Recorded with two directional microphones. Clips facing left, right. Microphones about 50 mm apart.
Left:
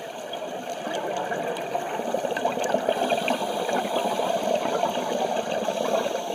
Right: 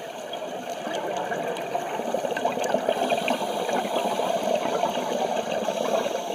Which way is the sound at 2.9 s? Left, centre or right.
Centre.